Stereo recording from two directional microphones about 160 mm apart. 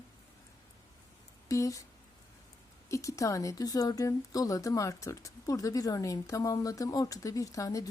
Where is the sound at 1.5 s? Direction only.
20° left (ahead or behind).